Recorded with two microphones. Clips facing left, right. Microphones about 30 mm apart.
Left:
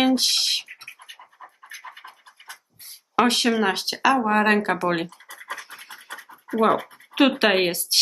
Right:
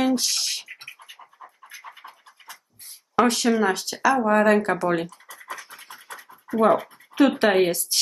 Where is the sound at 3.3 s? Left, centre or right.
Left.